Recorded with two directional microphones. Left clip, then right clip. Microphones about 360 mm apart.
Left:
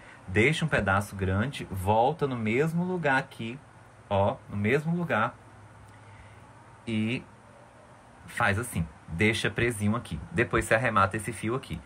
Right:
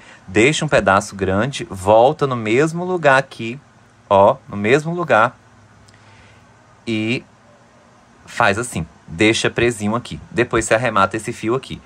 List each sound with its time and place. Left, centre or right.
0.3 s speech: centre
6.8 s speech: centre
8.4 s speech: centre